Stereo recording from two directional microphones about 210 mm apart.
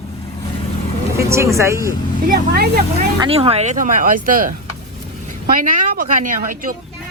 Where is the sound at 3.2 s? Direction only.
30° right (ahead or behind).